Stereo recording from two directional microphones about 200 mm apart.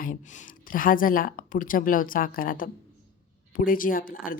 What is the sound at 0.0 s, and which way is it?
A woman's voice, 45° left (ahead or behind).